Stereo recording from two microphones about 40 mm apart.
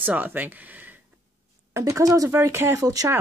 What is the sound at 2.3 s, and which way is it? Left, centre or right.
Speech, right.